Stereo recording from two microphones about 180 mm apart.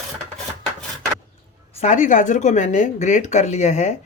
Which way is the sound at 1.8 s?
45° left (ahead or behind).